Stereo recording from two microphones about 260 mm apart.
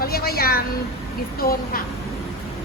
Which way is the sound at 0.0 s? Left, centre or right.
Left.